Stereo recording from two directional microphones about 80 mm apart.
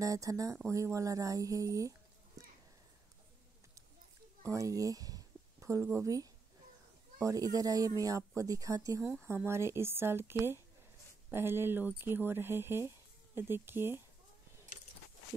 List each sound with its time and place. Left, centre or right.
0.0 s speech: right
4.4 s speech: right
9.2 s speech: right